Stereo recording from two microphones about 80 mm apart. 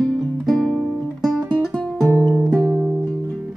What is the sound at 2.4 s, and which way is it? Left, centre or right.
Music, centre.